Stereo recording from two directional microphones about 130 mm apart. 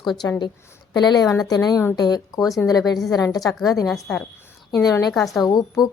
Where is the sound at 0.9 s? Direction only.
35° left (ahead or behind).